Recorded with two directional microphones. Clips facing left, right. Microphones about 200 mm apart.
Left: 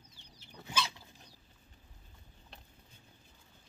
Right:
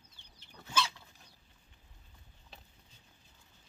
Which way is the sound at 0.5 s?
15° left (ahead or behind).